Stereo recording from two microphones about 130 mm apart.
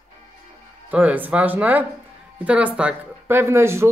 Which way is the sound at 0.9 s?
10° right (ahead or behind).